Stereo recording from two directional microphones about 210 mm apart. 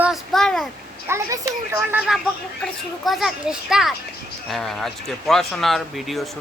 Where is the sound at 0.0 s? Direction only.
Centre (ahead or behind).